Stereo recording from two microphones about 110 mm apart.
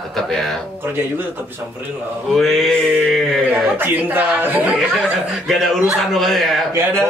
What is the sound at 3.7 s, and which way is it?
Speech, 20° right (ahead or behind).